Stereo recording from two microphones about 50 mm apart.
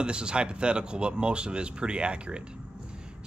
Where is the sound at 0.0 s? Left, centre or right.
Centre.